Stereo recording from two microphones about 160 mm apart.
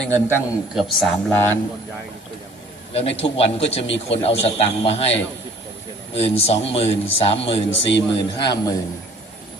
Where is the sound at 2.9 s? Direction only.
40° left (ahead or behind).